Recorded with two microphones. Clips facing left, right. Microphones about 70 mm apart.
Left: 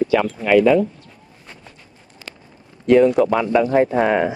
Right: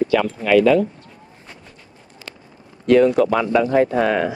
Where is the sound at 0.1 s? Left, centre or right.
Centre.